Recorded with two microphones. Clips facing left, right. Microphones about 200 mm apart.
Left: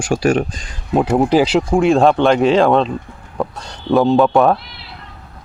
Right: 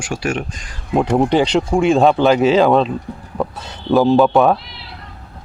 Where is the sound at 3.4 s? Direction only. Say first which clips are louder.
Left 1 dB; 5° right (ahead or behind).